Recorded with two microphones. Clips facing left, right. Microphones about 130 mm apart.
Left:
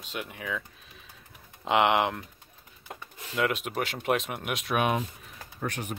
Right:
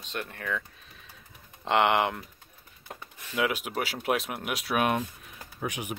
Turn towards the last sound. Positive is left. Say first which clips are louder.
# even
turn(degrees=-10)  # may be behind; listen again after turning